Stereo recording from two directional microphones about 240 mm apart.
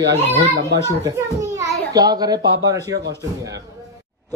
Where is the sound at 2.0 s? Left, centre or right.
Centre.